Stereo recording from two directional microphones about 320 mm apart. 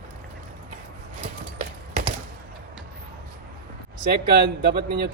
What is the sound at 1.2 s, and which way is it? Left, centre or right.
Clip-clop, right.